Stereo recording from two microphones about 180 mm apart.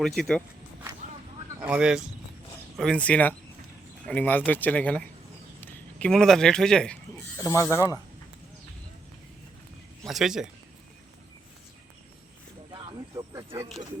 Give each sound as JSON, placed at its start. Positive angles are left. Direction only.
{"t": 0.0, "sound": "speech", "side_deg": 0}
{"t": 1.6, "sound": "speech", "side_deg": -5}
{"t": 10.1, "sound": "speech", "side_deg": 0}
{"t": 12.7, "sound": "a sound", "side_deg": -25}